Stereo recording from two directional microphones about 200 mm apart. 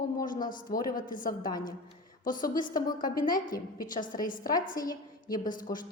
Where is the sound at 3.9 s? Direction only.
40° left (ahead or behind).